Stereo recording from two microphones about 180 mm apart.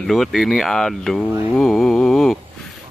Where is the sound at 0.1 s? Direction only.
Centre (ahead or behind).